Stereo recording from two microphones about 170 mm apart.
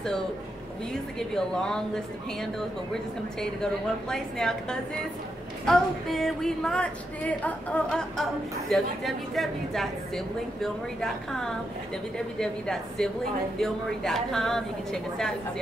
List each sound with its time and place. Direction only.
1.3 s speech: 5° left (ahead or behind)